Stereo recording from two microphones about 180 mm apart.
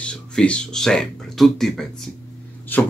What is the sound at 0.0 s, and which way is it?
Speech, 5° left (ahead or behind).